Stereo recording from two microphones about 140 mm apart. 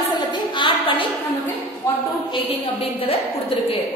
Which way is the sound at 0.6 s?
40° left (ahead or behind).